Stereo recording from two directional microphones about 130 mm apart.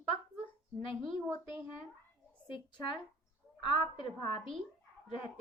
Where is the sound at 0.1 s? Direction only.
40° left (ahead or behind).